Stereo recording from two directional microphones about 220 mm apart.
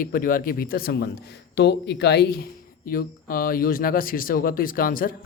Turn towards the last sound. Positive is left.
turn(degrees=40)  # may be behind; listen again after turning